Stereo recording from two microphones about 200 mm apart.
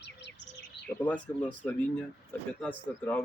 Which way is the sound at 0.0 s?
60° left (ahead or behind).